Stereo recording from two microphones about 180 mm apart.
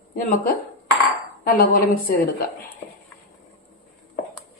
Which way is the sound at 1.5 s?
50° left (ahead or behind).